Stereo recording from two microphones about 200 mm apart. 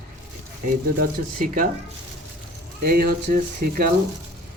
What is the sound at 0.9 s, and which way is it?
Speech, 45° right (ahead or behind).